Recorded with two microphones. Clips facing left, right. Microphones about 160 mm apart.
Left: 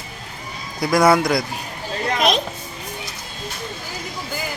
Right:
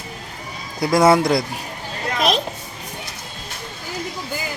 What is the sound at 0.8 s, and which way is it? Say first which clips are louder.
Speech: right 1 dB; 25° right (ahead or behind).